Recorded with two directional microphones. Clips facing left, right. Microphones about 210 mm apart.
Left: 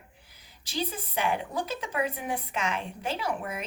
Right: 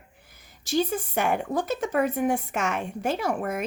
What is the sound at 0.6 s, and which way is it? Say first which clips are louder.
Speech: right 8 dB; 45° right (ahead or behind).